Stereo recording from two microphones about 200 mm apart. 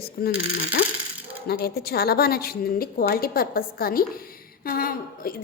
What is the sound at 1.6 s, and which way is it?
A woman's voice, 50° left (ahead or behind).